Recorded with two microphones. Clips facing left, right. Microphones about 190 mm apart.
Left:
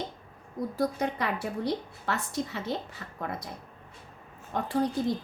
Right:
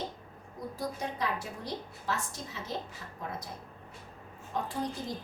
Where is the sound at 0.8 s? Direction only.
65° left (ahead or behind).